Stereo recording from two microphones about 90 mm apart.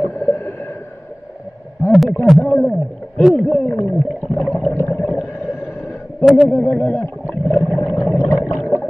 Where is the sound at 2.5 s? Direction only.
10° left (ahead or behind).